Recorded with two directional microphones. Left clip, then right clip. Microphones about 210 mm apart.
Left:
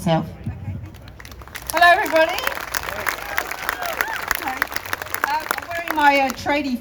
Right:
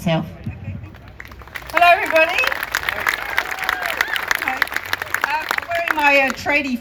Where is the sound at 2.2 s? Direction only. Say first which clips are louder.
Right 3 dB; 50° left (ahead or behind).